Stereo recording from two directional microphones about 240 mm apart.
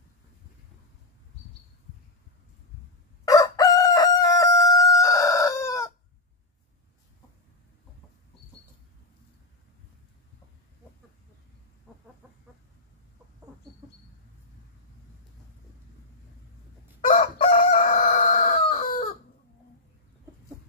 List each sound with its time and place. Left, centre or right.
3.3 s crowing: centre
17.1 s chicken: left